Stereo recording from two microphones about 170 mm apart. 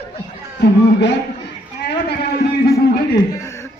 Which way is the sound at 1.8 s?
75° left (ahead or behind).